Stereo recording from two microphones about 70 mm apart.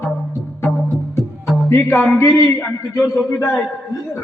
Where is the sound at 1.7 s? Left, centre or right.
Left.